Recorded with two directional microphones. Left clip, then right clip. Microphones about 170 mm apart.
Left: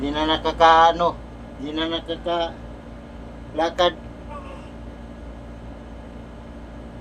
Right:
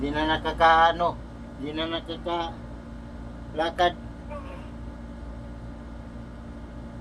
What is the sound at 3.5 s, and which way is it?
Speech, 15° left (ahead or behind).